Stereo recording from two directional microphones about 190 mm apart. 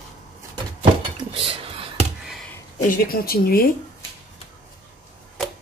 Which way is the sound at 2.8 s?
50° left (ahead or behind).